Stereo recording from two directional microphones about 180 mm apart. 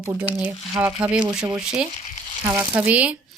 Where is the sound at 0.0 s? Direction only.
15° right (ahead or behind).